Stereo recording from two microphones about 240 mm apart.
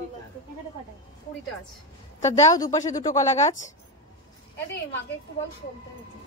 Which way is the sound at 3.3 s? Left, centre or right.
Left.